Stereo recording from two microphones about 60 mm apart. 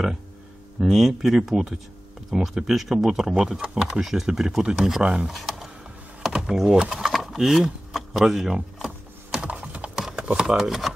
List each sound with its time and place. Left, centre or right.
0.7 s speech: centre
7.1 s a sound: centre
8.2 s speech: centre
8.5 s typing: centre
9.7 s a sound: right
10.1 s speech: centre